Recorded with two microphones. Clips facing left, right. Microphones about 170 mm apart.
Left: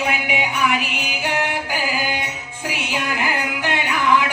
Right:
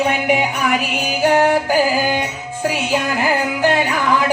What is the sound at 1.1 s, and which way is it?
Music, 40° right (ahead or behind).